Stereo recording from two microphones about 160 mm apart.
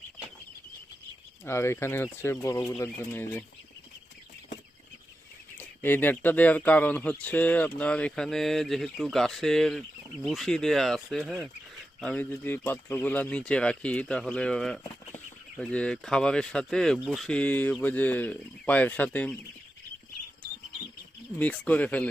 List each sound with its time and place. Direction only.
1.5 s speech: 15° left (ahead or behind)
5.5 s speech: 10° left (ahead or behind)
21.3 s speech: 10° left (ahead or behind)